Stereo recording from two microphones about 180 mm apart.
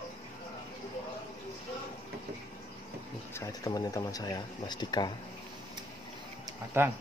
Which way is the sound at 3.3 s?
20° left (ahead or behind).